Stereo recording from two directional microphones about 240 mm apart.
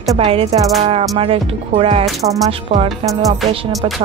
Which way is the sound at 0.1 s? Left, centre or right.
Right.